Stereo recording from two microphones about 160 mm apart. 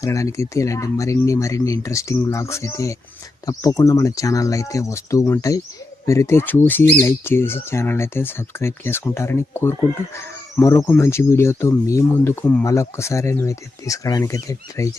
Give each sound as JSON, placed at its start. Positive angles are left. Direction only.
{"t": 0.0, "sound": "speech", "side_deg": 20}